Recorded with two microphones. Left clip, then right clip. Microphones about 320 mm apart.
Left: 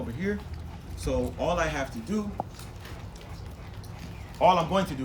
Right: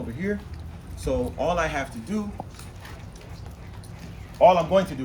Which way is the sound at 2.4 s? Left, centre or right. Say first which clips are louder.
Left 4 dB; centre.